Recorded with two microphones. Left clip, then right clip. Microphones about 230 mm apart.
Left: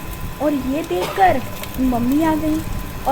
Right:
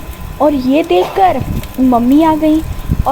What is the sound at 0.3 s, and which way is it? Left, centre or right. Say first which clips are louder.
Speech: right 10 dB; centre.